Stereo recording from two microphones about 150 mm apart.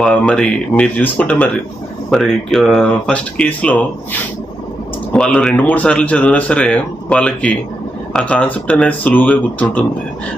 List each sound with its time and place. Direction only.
0.0 s speech: 5° left (ahead or behind)
5.1 s speech: 5° left (ahead or behind)